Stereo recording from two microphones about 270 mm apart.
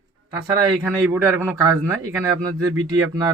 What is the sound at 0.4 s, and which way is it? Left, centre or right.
Speech, centre.